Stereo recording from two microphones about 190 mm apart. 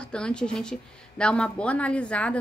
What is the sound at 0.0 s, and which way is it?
A woman's voice, 5° left (ahead or behind).